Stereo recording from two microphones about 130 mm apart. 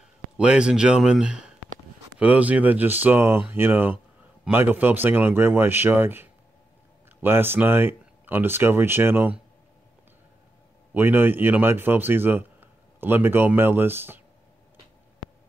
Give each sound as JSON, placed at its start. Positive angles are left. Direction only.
{"t": 0.4, "sound": "speech", "side_deg": -5}
{"t": 10.9, "sound": "a man's voice", "side_deg": -15}